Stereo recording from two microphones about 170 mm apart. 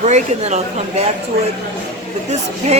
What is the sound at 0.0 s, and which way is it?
Speech, 45° right (ahead or behind).